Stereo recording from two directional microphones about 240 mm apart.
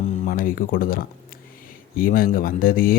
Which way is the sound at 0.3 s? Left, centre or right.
Left.